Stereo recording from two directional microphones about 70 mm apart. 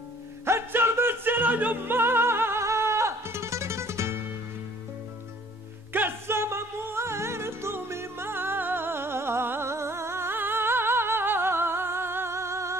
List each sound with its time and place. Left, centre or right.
0.5 s music: right
5.9 s music: right